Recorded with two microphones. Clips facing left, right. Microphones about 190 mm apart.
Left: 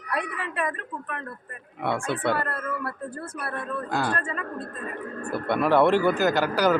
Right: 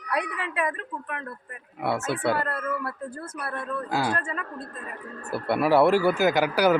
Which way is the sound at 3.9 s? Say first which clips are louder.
Even; 10° right (ahead or behind).